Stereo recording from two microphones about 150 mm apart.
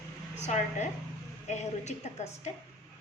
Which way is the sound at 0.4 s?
50° left (ahead or behind).